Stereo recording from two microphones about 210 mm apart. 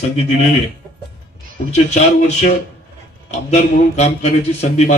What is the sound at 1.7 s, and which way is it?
A man's voice, 35° left (ahead or behind).